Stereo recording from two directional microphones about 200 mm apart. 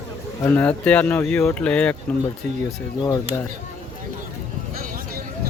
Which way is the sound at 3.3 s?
15° left (ahead or behind).